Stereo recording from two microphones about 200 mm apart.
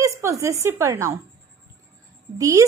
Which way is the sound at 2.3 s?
15° right (ahead or behind).